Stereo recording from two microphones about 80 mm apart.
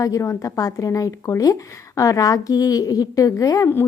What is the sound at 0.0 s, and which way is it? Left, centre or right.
A woman's voice, left.